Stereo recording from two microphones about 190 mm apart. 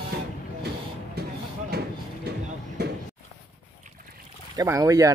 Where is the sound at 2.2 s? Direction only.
60° right (ahead or behind).